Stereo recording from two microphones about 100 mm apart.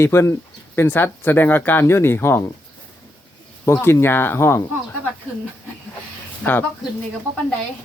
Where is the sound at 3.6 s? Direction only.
30° left (ahead or behind).